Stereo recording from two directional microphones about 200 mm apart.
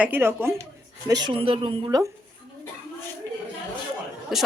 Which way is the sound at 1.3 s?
25° right (ahead or behind).